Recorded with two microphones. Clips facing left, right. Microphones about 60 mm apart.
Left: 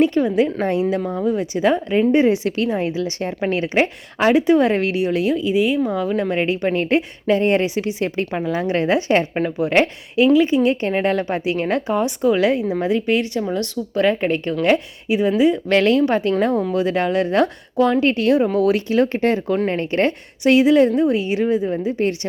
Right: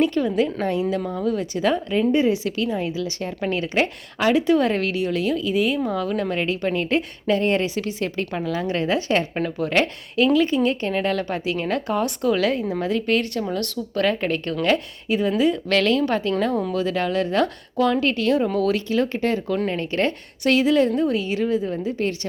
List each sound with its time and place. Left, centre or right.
0.0 s a woman's voice: left
11.9 s speech: centre
15.7 s a woman's voice: left
20.4 s a woman's voice: centre